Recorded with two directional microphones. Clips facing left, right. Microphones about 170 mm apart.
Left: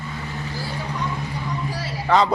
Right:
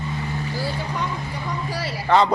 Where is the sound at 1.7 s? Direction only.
75° right (ahead or behind).